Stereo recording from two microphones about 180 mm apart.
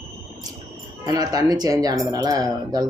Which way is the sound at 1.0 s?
20° right (ahead or behind).